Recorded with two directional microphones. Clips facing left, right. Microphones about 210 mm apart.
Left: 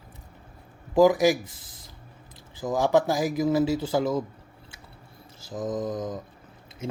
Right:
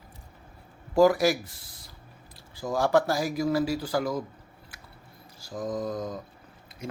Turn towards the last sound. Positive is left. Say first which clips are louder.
# left 4 dB
turn(degrees=25)  # may be behind; listen again after turning